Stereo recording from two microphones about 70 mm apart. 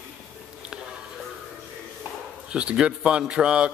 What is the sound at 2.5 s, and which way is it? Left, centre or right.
Speech, centre.